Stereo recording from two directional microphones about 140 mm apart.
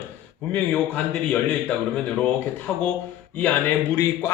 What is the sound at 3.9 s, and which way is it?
Speech, 15° left (ahead or behind).